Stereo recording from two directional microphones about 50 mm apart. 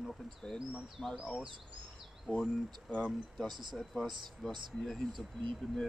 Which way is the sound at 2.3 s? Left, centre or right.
Left.